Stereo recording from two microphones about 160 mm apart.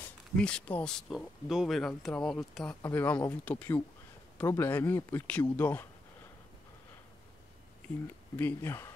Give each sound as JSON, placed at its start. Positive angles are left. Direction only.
{"t": 0.4, "sound": "speech", "side_deg": 5}
{"t": 8.4, "sound": "speech", "side_deg": 15}